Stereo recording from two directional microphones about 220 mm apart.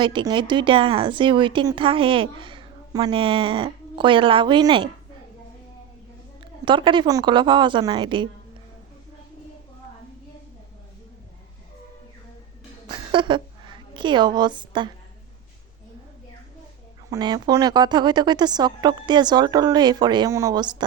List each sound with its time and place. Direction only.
0.0 s a woman's voice: 20° right (ahead or behind)
6.4 s a woman's voice: 20° right (ahead or behind)
13.1 s a woman's voice: 20° right (ahead or behind)
17.1 s a woman's voice: 20° right (ahead or behind)